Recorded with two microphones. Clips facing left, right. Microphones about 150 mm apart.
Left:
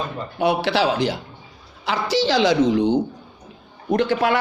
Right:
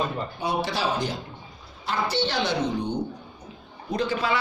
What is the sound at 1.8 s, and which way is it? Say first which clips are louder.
A woman's voice: left 5 dB; 90° left.